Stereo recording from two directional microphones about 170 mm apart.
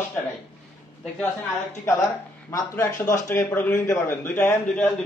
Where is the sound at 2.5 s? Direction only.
20° left (ahead or behind).